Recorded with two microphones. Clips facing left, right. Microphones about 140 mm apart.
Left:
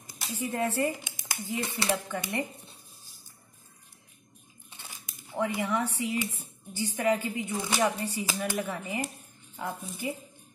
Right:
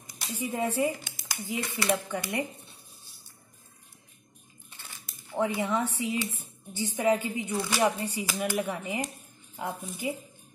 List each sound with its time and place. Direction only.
0.4 s a woman's voice: 10° right (ahead or behind)
0.9 s a sound: 20° left (ahead or behind)
1.6 s speech: 30° left (ahead or behind)
2.0 s a woman's voice: 15° right (ahead or behind)
5.3 s speech: 20° right (ahead or behind)
7.5 s speech: 15° left (ahead or behind)
7.8 s a woman's voice: 20° right (ahead or behind)